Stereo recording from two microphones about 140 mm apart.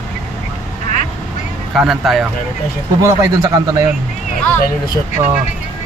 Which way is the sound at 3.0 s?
20° right (ahead or behind).